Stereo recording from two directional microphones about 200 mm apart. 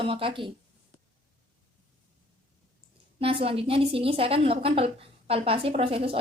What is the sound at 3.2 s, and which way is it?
A woman's voice, 30° right (ahead or behind).